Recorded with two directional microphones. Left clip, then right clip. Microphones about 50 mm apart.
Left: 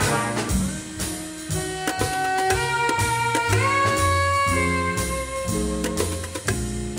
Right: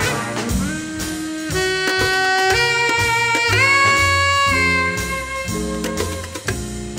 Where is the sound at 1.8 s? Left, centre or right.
Left.